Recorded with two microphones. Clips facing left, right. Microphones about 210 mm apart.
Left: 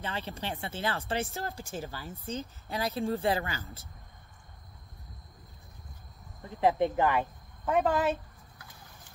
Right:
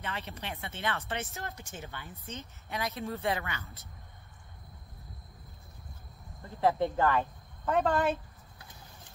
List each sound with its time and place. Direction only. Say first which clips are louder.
0.0 s speech: left 3 dB; 30° left (ahead or behind)
6.4 s speech: left 2 dB; 15° left (ahead or behind)